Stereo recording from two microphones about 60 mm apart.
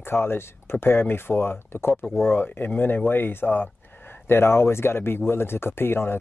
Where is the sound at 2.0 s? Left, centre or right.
Centre.